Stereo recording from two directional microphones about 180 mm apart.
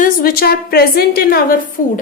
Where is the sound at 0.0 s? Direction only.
55° left (ahead or behind).